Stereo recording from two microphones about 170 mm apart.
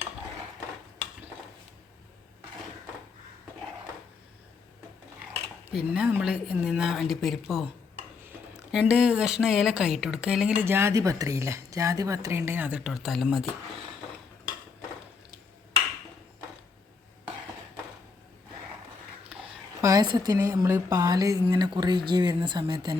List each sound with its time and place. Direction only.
5.7 s speech: 5° right (ahead or behind)
19.8 s a woman's voice: 20° right (ahead or behind)